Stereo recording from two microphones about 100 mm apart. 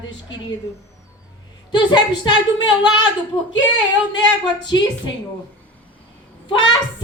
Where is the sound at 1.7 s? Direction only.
45° left (ahead or behind).